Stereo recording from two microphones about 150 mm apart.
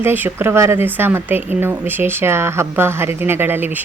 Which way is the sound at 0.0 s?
15° right (ahead or behind).